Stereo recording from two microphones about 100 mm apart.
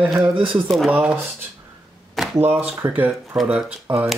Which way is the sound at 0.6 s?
Centre (ahead or behind).